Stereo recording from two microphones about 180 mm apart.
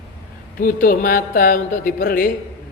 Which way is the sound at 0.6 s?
50° left (ahead or behind).